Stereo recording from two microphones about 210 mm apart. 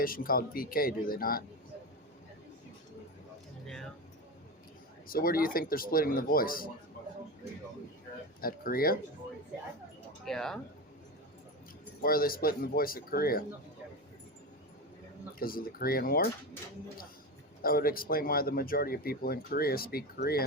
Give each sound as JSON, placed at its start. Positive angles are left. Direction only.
{"t": 0.0, "sound": "speech", "side_deg": 45}
{"t": 5.0, "sound": "speech", "side_deg": 45}
{"t": 8.4, "sound": "speech", "side_deg": 45}
{"t": 10.2, "sound": "speech", "side_deg": 0}
{"t": 12.0, "sound": "speech", "side_deg": 45}
{"t": 15.4, "sound": "speech", "side_deg": 45}
{"t": 17.6, "sound": "speech", "side_deg": 45}